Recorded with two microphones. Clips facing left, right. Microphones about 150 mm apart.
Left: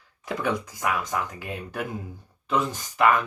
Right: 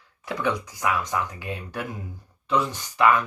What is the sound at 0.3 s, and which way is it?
Speech, 50° left (ahead or behind).